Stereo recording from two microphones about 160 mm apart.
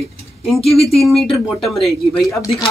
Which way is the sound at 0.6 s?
40° left (ahead or behind).